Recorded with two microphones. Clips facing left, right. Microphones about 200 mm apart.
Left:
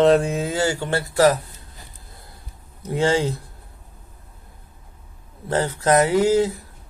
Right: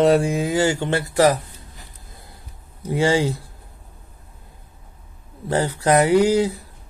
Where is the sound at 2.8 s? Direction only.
10° right (ahead or behind).